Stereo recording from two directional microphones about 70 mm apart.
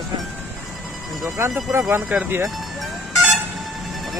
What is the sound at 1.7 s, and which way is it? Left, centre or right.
Speech, right.